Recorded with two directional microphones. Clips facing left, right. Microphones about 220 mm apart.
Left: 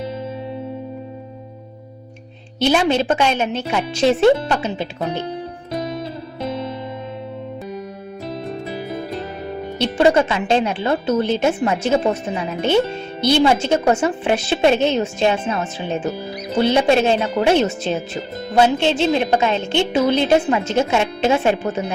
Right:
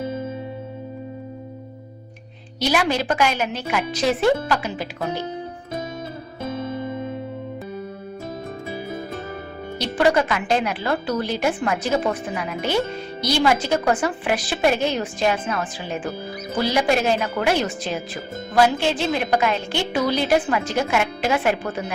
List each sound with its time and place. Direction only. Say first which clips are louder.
2.6 s speech: left 5 dB; 25° left (ahead or behind)
9.7 s speech: left 4 dB; 25° left (ahead or behind)